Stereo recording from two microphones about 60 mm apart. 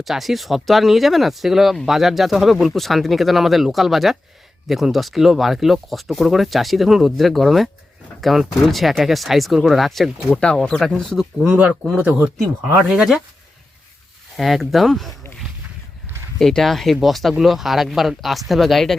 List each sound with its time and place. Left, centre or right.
0.0 s speech: centre
10.3 s speech: centre
11.3 s speech: centre
12.4 s speech: right
12.9 s speech: centre
14.3 s speech: centre
16.4 s speech: centre